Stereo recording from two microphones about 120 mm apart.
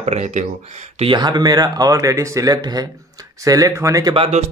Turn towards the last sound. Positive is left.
turn(degrees=-55)  # may be behind; listen again after turning